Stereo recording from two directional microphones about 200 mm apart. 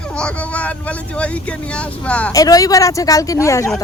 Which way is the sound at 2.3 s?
20° left (ahead or behind).